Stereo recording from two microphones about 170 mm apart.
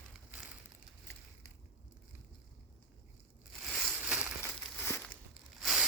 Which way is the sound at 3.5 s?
Centre (ahead or behind).